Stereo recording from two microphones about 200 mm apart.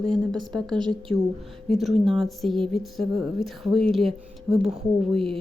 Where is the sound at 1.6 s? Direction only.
Centre (ahead or behind).